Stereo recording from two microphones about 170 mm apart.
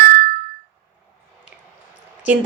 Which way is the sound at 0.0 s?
75° right (ahead or behind).